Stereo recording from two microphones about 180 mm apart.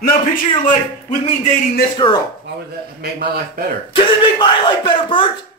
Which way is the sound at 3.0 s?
60° right (ahead or behind).